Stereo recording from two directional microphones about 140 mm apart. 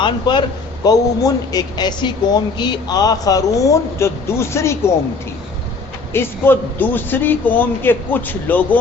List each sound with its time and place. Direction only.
0.0 s a woman's voice: 35° left (ahead or behind)
6.1 s a man's voice: 15° left (ahead or behind)